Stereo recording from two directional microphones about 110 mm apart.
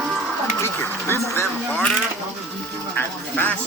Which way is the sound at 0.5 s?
20° left (ahead or behind).